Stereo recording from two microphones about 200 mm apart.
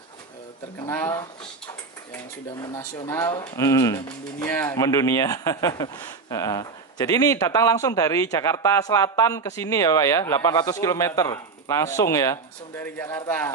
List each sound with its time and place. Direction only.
0.7 s speech: 15° left (ahead or behind)
2.6 s speech: 15° left (ahead or behind)